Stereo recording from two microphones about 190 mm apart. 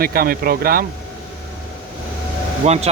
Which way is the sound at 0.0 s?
50° right (ahead or behind).